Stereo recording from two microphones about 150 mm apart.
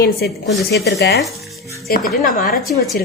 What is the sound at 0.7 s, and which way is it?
Speech, 90° left.